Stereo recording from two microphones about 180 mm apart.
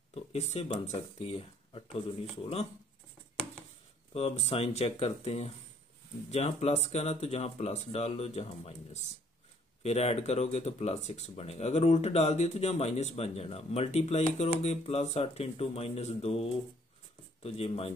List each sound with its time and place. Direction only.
0.1 s speech: 35° left (ahead or behind)
4.1 s speech: 35° left (ahead or behind)